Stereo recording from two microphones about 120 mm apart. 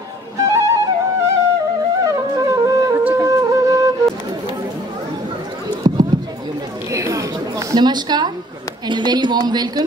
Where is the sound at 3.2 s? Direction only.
25° right (ahead or behind).